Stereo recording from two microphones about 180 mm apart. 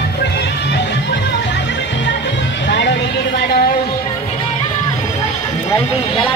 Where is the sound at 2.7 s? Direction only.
80° left.